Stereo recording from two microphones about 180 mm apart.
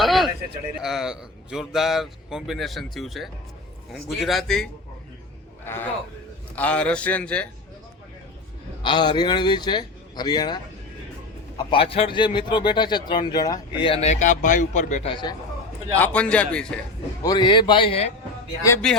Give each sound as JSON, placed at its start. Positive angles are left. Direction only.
{"t": 0.0, "sound": "a sound", "side_deg": 0}
{"t": 0.8, "sound": "a man's voice", "side_deg": -5}
{"t": 6.6, "sound": "a man's voice", "side_deg": 5}
{"t": 8.8, "sound": "speech", "side_deg": 25}
{"t": 15.1, "sound": "speech", "side_deg": 25}
{"t": 16.0, "sound": "a man's voice", "side_deg": 5}
{"t": 17.2, "sound": "speech", "side_deg": 25}
{"t": 18.8, "sound": "a man's voice", "side_deg": 5}